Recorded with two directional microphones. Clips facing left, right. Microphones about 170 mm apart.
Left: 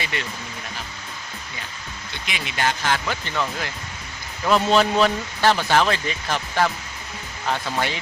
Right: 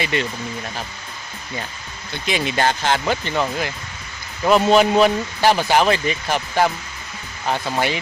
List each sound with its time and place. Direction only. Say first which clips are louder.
0.0 s speech: right 7 dB; 25° right (ahead or behind)
2.2 s speech: right 6 dB; 35° right (ahead or behind); by 7.9 s 10° right (ahead or behind)